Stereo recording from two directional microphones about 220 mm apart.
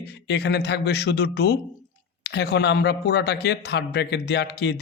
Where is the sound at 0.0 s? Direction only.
50° left (ahead or behind).